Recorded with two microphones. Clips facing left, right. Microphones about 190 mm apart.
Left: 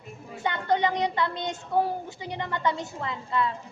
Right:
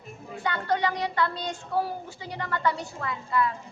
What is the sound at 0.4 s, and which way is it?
A child's voice, 20° left (ahead or behind).